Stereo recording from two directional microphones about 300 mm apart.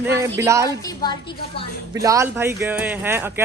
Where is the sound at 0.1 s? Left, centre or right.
Centre.